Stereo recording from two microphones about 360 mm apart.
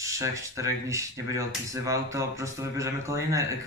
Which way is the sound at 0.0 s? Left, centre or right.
Centre.